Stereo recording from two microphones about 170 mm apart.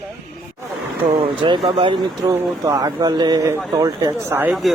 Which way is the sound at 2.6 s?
20° right (ahead or behind).